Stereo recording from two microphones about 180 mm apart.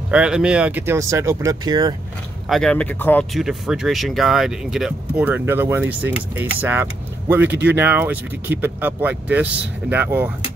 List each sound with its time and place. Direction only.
0.1 s speech: 5° right (ahead or behind); by 2.0 s 20° right (ahead or behind)
2.4 s speech: centre (ahead or behind)
3.3 s speech: centre (ahead or behind)